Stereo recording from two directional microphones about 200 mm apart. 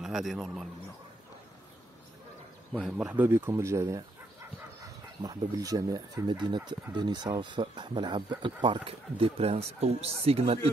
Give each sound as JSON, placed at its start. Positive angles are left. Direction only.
{"t": 0.0, "sound": "a man's voice", "side_deg": 0}
{"t": 2.7, "sound": "speech", "side_deg": -5}
{"t": 5.2, "sound": "speech", "side_deg": -20}